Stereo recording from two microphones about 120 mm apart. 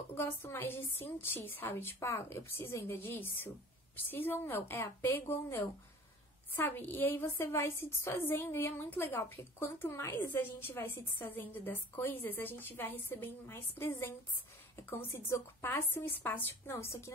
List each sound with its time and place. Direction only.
0.1 s a woman's voice: 20° left (ahead or behind)